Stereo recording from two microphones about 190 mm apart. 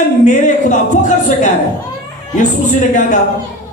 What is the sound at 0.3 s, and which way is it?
A woman's voice, 40° left (ahead or behind).